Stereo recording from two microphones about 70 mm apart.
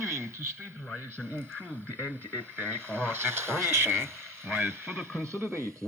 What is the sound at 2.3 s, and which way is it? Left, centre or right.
Speech, right.